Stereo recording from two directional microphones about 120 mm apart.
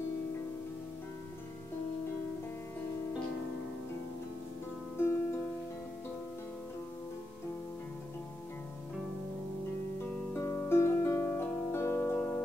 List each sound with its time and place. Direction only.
4.9 s music: 20° left (ahead or behind)
10.0 s music: 20° left (ahead or behind)